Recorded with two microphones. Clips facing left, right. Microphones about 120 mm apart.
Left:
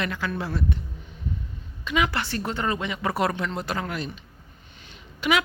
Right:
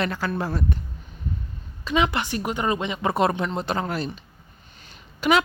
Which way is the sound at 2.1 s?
15° right (ahead or behind).